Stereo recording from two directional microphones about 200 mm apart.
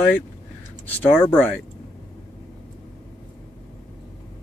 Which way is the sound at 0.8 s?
10° left (ahead or behind).